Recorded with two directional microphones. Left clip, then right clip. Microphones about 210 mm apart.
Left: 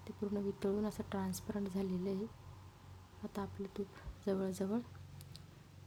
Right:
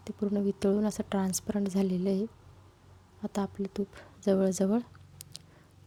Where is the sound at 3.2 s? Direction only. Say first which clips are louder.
Right 10 dB; 35° right (ahead or behind).